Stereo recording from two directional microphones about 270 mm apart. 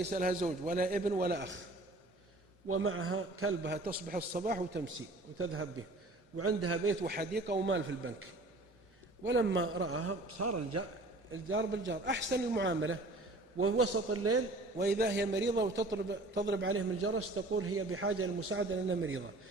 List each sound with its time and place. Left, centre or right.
0.0 s a man's voice: right
2.6 s a man's voice: right
4.9 s a man's voice: right
7.0 s a man's voice: right
9.2 s a man's voice: right
11.3 s a man's voice: right
14.8 s a man's voice: right